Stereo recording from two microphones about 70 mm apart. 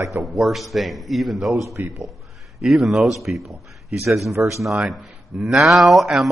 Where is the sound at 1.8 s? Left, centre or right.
Right.